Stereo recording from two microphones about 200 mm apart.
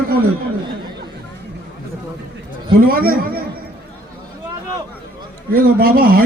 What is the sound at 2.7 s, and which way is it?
Speech, 45° right (ahead or behind).